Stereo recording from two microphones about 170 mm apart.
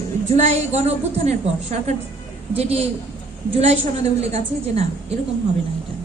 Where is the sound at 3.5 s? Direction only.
40° right (ahead or behind).